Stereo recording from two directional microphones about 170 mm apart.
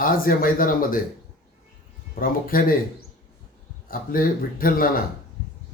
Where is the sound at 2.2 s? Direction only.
55° left (ahead or behind).